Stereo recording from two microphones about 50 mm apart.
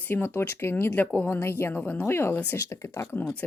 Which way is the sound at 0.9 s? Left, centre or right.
Left.